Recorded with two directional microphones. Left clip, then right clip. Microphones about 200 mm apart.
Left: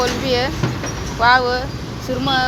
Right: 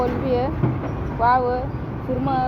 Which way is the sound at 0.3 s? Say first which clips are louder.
Left 3 dB; 60° left (ahead or behind).